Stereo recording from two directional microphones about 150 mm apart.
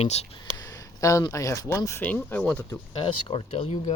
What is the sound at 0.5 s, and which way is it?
Speech, 25° left (ahead or behind).